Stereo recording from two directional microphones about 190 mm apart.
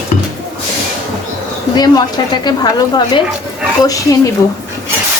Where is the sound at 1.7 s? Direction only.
20° left (ahead or behind).